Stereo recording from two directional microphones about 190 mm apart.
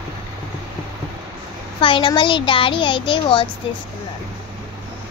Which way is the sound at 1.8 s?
25° left (ahead or behind).